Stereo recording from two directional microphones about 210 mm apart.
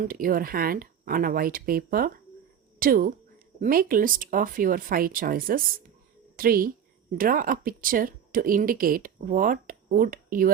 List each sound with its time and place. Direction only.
0.0 s speech: 40° right (ahead or behind)